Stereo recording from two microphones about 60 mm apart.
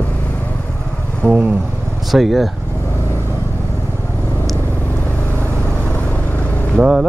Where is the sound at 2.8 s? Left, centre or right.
Left.